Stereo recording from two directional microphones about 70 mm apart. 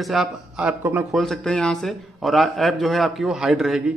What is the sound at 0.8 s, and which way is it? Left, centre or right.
Speech, right.